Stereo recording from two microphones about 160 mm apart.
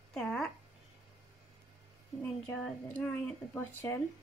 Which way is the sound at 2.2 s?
5° left (ahead or behind).